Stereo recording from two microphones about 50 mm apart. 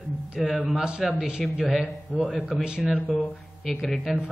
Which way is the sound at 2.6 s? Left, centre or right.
Centre.